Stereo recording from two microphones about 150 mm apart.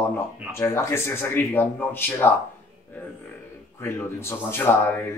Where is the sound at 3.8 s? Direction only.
20° left (ahead or behind).